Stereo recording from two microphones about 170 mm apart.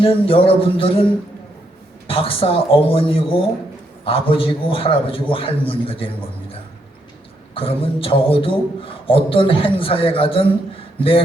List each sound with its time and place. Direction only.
0.0 s a man's voice: 35° left (ahead or behind)
2.0 s a man's voice: 35° left (ahead or behind)
7.5 s a man's voice: 30° left (ahead or behind)